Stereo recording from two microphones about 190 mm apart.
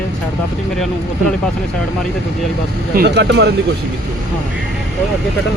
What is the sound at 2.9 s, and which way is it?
Speech, 55° right (ahead or behind).